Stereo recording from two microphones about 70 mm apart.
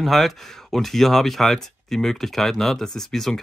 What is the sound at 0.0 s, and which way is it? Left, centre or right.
Speech, centre.